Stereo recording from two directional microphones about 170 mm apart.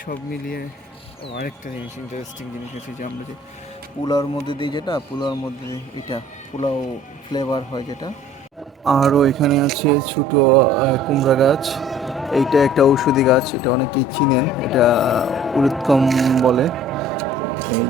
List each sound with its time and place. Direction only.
0.0 s speech: 55° left (ahead or behind)
4.0 s speech: 20° left (ahead or behind)
8.8 s speech: centre (ahead or behind)